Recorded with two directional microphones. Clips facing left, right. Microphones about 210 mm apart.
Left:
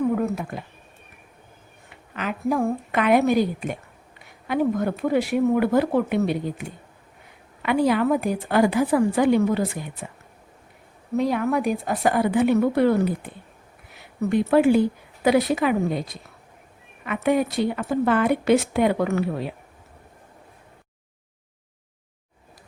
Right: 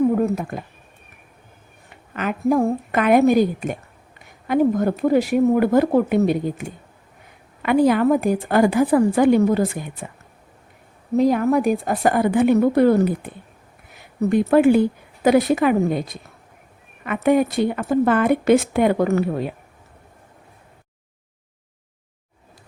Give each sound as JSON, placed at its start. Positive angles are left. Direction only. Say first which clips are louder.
{"t": 0.2, "sound": "a sound", "louder": "right 4 dB", "side_deg": -45}
{"t": 2.1, "sound": "speech", "louder": "right 5 dB", "side_deg": -45}
{"t": 11.2, "sound": "a woman's voice", "louder": "right 5 dB", "side_deg": -40}